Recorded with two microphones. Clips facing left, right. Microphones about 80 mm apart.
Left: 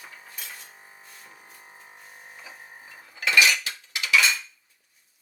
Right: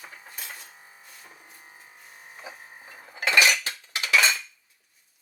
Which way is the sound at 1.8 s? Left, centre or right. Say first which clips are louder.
Left 2 dB; left.